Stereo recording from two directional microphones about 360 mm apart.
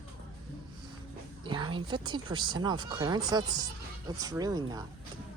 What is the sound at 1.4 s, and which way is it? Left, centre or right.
Speech, centre.